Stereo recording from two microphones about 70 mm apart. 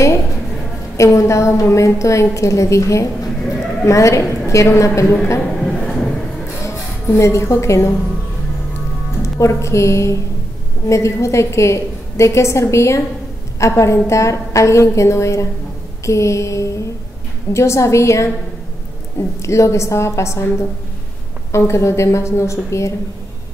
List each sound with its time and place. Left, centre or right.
0.9 s a woman's voice: left
5.4 s a sound: centre
6.6 s a woman's voice: left
9.2 s a woman's voice: left
19.4 s a woman's voice: left